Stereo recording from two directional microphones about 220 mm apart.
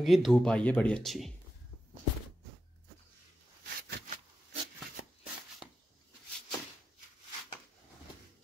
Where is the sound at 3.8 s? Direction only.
45° right (ahead or behind).